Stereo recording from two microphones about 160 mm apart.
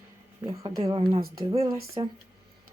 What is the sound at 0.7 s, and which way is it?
A woman's voice, 25° right (ahead or behind).